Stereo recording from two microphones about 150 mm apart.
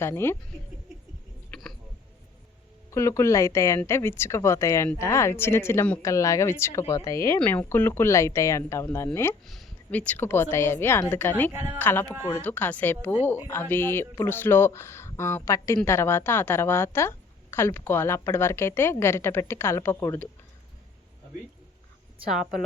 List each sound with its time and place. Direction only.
0.0 s speech: 15° left (ahead or behind)
1.5 s a sound: 5° left (ahead or behind)
2.9 s speech: 20° left (ahead or behind)
9.5 s speech: 5° left (ahead or behind)
11.5 s speech: 15° right (ahead or behind)
11.8 s speech: 15° left (ahead or behind)